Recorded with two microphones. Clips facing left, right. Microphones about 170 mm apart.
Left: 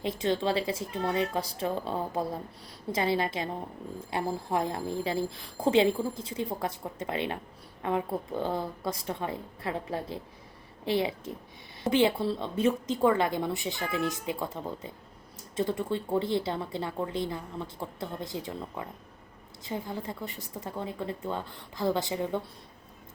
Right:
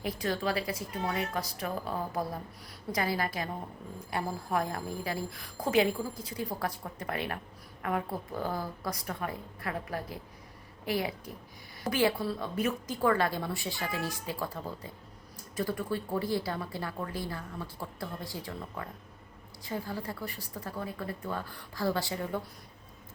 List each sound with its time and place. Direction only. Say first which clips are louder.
0.0 s speech: left 4 dB; 25° left (ahead or behind)